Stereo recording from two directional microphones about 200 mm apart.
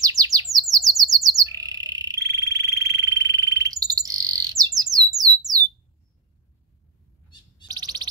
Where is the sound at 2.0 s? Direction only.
20° right (ahead or behind).